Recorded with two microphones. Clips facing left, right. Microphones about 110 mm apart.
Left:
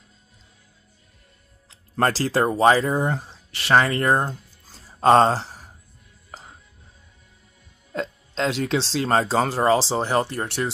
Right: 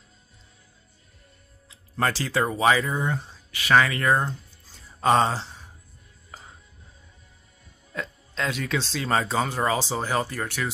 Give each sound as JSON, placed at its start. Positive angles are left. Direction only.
{"t": 2.0, "sound": "speech", "side_deg": 40}
{"t": 7.9, "sound": "speech", "side_deg": 30}